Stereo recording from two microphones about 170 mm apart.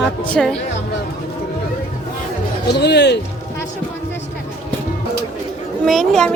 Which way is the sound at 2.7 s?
80° left.